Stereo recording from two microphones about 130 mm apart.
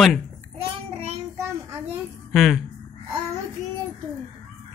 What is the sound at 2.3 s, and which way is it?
Speech, centre (ahead or behind).